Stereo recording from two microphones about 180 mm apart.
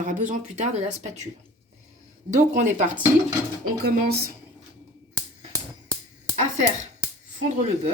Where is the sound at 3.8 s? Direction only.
60° right (ahead or behind).